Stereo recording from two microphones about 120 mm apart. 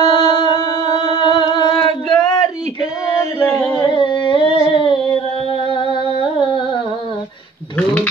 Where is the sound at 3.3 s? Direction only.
15° left (ahead or behind).